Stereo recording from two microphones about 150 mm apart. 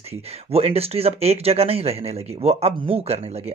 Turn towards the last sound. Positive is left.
turn(degrees=-45)  # may be behind; listen again after turning